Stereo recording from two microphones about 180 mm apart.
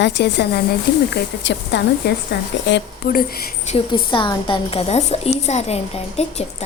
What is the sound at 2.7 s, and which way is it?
Speech, 90° left.